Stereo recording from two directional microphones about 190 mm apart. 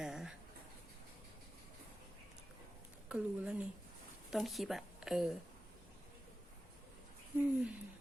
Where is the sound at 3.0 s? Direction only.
5° right (ahead or behind).